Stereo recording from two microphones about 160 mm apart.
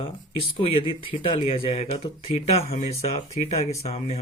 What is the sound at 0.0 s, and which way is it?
Speech, 35° left (ahead or behind).